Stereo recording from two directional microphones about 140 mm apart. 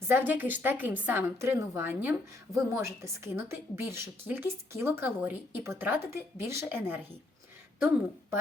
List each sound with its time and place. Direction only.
0.1 s a woman's voice: 15° right (ahead or behind)